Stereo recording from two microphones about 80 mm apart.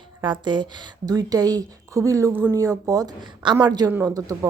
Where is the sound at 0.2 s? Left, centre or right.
Right.